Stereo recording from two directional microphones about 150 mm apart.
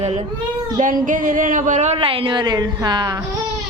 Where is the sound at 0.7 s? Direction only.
60° right (ahead or behind); by 3.2 s 25° right (ahead or behind).